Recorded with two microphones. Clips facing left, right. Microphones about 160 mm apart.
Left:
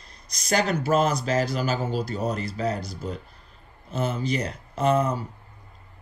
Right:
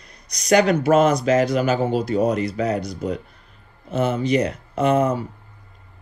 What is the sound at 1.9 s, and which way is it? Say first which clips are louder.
Speech: right 8 dB; 60° right (ahead or behind).